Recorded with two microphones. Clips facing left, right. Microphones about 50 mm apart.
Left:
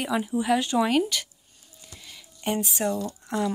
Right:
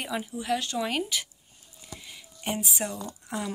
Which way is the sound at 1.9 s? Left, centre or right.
Centre.